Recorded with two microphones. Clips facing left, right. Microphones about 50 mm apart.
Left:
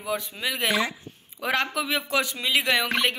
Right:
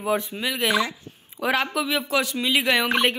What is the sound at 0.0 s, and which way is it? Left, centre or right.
Speech, right.